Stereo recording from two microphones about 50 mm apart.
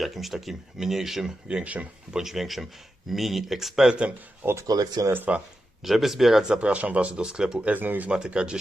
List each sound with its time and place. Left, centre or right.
0.0 s speech: centre
1.5 s speech: right
2.1 s speech: centre
4.4 s speech: right
5.1 s speech: right
5.8 s speech: centre
6.6 s speech: right
7.7 s speech: right
8.1 s speech: centre